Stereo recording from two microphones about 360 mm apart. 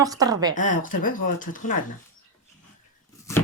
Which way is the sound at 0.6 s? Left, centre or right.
Left.